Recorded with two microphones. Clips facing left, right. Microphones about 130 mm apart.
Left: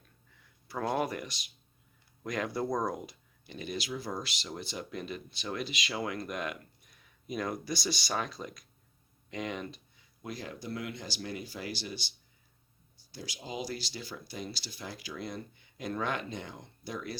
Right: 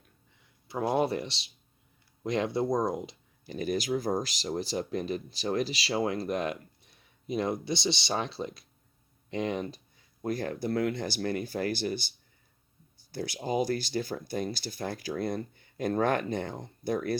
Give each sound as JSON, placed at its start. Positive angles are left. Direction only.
{"t": 0.7, "sound": "speech", "side_deg": -20}
{"t": 3.4, "sound": "speech", "side_deg": -40}
{"t": 9.3, "sound": "a sound", "side_deg": -30}
{"t": 10.3, "sound": "speech", "side_deg": -55}